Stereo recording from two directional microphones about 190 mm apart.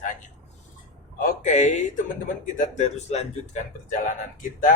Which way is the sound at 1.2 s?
40° left (ahead or behind).